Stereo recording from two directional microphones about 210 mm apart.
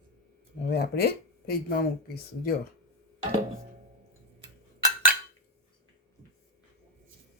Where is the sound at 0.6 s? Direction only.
50° left (ahead or behind).